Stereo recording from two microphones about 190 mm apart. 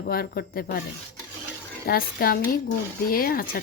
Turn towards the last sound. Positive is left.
turn(degrees=50)  # may be behind; listen again after turning